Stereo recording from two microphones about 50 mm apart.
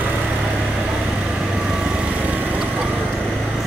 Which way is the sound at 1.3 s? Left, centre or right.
Centre.